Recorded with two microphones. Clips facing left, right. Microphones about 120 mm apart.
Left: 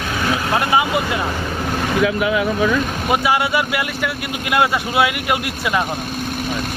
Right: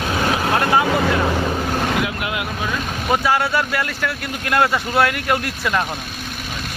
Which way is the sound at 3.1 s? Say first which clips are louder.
Even; 10° left (ahead or behind).